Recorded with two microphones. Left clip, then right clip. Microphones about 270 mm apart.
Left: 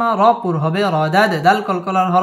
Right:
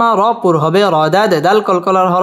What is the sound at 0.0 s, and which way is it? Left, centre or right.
Speech, right.